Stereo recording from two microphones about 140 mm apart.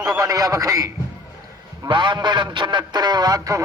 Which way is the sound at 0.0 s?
25° right (ahead or behind).